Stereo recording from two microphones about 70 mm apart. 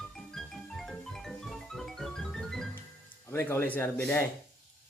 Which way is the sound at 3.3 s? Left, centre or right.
Left.